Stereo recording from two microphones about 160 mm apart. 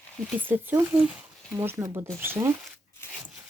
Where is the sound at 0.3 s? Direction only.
10° right (ahead or behind).